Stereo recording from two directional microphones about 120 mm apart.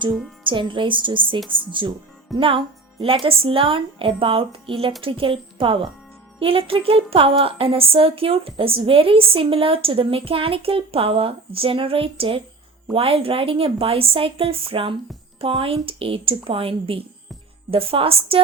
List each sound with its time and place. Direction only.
0.4 s speech: 45° right (ahead or behind)